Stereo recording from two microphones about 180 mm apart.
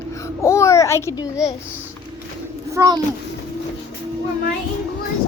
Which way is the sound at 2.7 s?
20° right (ahead or behind).